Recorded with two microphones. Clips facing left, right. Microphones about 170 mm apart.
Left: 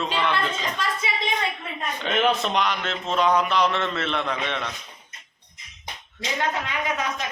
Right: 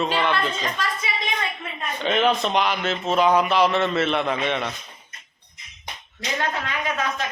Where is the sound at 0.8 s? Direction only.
25° left (ahead or behind).